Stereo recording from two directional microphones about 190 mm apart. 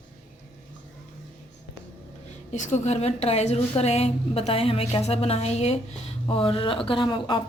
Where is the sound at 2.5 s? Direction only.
40° left (ahead or behind).